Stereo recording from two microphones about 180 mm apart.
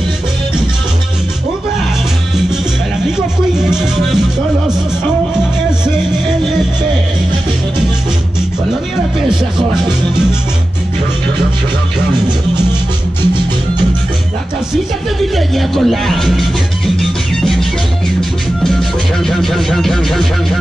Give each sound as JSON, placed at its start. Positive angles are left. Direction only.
{"t": 9.3, "sound": "music", "side_deg": -25}
{"t": 15.3, "sound": "music", "side_deg": 0}
{"t": 18.6, "sound": "music", "side_deg": 0}